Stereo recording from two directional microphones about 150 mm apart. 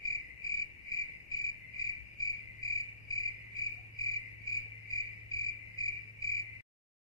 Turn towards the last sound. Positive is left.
turn(degrees=20)  # may be behind; listen again after turning